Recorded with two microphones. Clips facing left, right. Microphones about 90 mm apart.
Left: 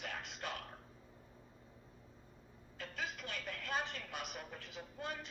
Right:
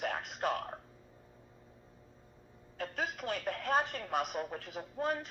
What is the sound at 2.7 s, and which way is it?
A woman's voice, 50° right (ahead or behind).